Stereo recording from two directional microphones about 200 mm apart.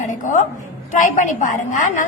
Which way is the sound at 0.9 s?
40° left (ahead or behind).